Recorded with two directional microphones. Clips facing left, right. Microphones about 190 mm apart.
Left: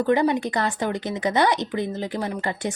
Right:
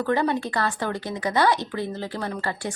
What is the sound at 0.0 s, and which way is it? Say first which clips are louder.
A woman's voice: left 3 dB; 20° left (ahead or behind).